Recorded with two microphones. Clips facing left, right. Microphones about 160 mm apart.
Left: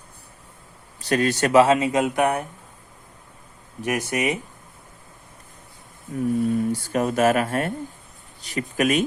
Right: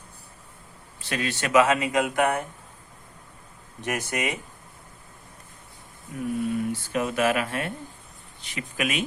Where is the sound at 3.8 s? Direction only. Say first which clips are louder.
Left 5 dB; 15° left (ahead or behind).